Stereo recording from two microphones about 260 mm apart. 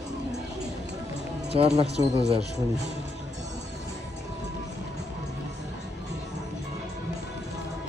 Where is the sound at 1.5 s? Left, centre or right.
Right.